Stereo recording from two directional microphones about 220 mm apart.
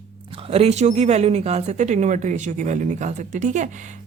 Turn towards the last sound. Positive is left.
turn(degrees=-35)  # may be behind; listen again after turning